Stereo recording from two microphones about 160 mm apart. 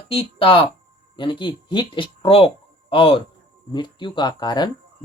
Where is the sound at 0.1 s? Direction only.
35° left (ahead or behind).